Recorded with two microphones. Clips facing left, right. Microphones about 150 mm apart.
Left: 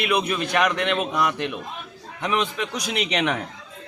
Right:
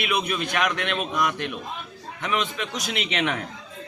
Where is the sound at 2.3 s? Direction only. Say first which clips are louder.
Left 2 dB; 40° left (ahead or behind).